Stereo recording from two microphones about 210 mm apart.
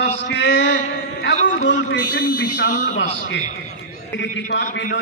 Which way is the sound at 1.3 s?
35° left (ahead or behind).